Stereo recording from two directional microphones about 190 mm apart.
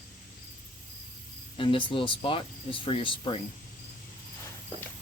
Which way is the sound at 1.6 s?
25° left (ahead or behind).